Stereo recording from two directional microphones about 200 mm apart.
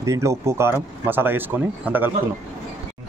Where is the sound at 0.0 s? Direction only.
15° right (ahead or behind).